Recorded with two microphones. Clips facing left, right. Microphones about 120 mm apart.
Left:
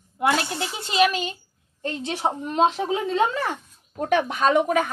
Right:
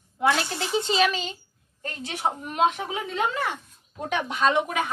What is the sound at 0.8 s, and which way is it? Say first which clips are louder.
Speech: left 2 dB; 10° left (ahead or behind).